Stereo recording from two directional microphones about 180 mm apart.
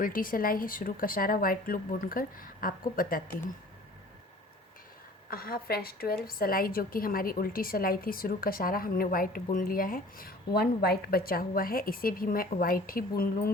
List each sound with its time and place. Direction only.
0.0 s a woman's voice: 50° left (ahead or behind)
5.3 s a woman's voice: 55° left (ahead or behind)